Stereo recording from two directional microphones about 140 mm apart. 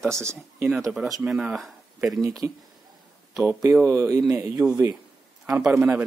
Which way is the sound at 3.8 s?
20° right (ahead or behind).